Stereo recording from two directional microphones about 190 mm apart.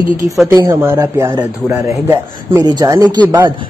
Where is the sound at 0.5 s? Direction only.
20° right (ahead or behind).